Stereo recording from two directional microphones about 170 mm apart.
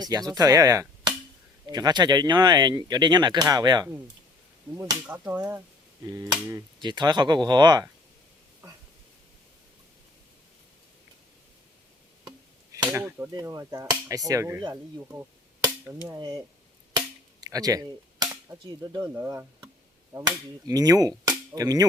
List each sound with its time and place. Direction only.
0.0 s speech: 20° right (ahead or behind)
4.8 s speech: 10° right (ahead or behind)
6.1 s speech: 20° right (ahead or behind)
12.7 s speech: 15° right (ahead or behind)
14.7 s cap gun: 15° right (ahead or behind)
16.1 s speech: 25° right (ahead or behind)
17.4 s cap gun: 20° right (ahead or behind)
20.1 s speech: 20° right (ahead or behind)